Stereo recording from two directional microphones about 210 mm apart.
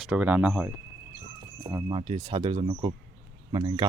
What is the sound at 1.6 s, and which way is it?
Speech, 15° right (ahead or behind).